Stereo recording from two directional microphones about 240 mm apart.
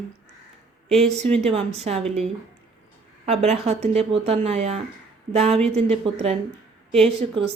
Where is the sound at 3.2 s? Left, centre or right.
Right.